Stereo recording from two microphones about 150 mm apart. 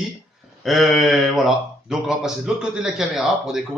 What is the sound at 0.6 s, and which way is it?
Speech, centre (ahead or behind).